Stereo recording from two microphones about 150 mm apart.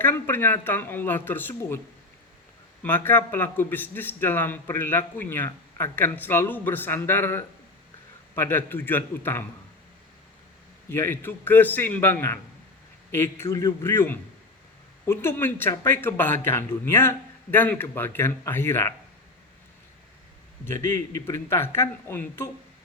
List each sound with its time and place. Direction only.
0.0 s a man's voice: 15° left (ahead or behind)
2.8 s a man's voice: 15° left (ahead or behind)
10.8 s a man's voice: 15° left (ahead or behind)
20.9 s a man's voice: 20° left (ahead or behind)